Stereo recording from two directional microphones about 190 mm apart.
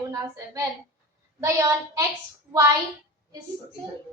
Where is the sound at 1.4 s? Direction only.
15° right (ahead or behind).